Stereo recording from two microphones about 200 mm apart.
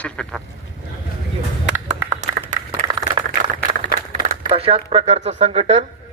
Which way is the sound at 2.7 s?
20° right (ahead or behind).